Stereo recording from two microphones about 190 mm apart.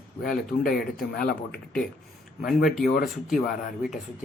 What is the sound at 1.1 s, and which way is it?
Speech, 55° left (ahead or behind).